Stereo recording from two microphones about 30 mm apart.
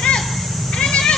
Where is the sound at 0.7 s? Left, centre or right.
Left.